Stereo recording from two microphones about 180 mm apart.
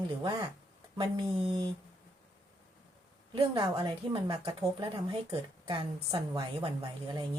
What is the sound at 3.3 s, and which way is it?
A woman's voice, 25° right (ahead or behind).